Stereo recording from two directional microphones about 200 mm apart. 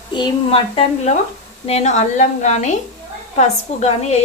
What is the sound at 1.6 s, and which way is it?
A woman's voice, 35° left (ahead or behind).